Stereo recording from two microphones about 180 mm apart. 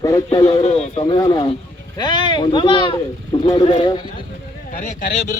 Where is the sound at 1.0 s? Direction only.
25° left (ahead or behind).